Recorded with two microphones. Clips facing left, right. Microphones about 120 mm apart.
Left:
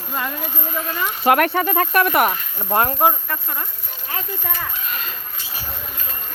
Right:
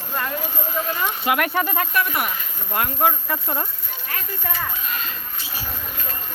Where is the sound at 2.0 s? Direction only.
60° left (ahead or behind).